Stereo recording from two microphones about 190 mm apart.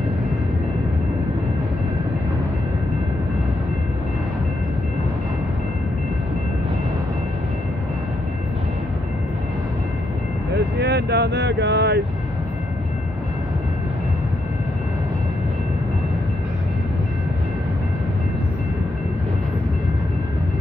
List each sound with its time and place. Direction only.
10.5 s vehicle: 60° right (ahead or behind)